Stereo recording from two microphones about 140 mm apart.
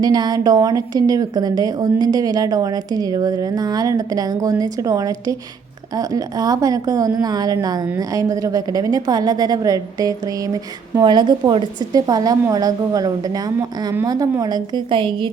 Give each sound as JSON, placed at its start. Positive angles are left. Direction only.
{"t": 0.0, "sound": "a woman's voice", "side_deg": -30}